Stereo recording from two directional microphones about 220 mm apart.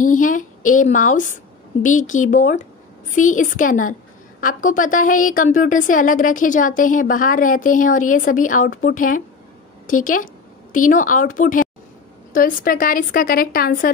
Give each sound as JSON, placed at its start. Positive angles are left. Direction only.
{"t": 0.0, "sound": "a woman's voice", "side_deg": 35}